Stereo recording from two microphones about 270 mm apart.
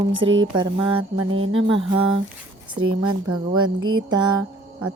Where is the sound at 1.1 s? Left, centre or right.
Right.